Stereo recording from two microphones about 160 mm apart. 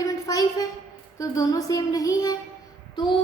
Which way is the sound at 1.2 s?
20° left (ahead or behind).